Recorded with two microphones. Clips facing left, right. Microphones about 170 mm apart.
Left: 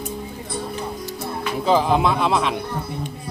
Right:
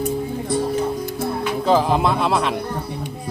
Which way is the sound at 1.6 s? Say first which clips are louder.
Even; centre (ahead or behind).